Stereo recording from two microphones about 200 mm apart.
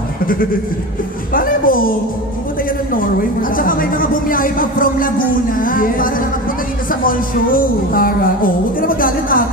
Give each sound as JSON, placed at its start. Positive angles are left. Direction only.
{"t": 1.3, "sound": "music", "side_deg": 45}
{"t": 3.0, "sound": "a woman's voice", "side_deg": 45}